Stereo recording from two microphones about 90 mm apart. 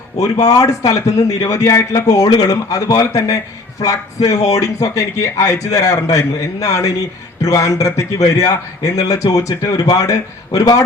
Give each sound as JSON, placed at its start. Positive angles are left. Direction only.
{"t": 0.2, "sound": "a man's voice", "side_deg": 40}